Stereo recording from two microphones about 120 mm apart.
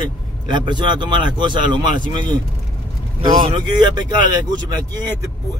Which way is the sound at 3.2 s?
35° right (ahead or behind).